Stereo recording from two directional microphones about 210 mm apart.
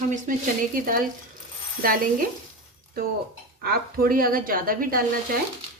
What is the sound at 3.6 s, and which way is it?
Speech, 45° right (ahead or behind).